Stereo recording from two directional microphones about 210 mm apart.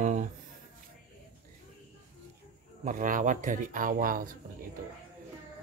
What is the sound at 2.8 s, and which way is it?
Speech, 40° right (ahead or behind).